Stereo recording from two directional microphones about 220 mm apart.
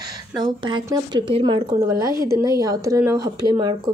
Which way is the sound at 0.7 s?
20° right (ahead or behind).